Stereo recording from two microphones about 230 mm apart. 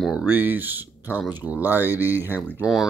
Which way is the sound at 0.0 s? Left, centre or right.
Centre.